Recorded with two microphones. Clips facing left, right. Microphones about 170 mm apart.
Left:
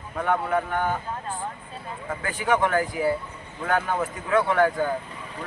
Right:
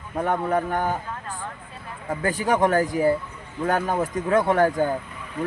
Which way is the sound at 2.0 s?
40° right (ahead or behind).